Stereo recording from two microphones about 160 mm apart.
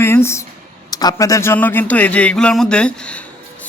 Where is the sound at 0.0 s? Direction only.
15° left (ahead or behind).